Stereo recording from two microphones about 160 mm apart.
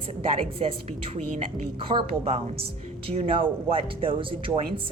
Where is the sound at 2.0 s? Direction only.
40° right (ahead or behind).